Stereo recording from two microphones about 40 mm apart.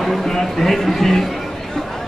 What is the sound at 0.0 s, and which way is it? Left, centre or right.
Speech, centre.